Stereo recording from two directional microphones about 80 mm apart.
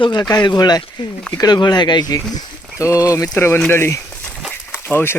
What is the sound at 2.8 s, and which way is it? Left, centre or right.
Speech, left.